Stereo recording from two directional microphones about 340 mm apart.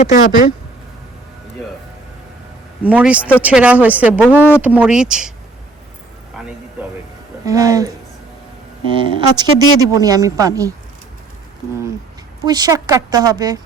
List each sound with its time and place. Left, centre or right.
0.0 s speech: left
2.8 s speech: centre
7.4 s speech: centre
9.0 s speech: centre
12.5 s speech: centre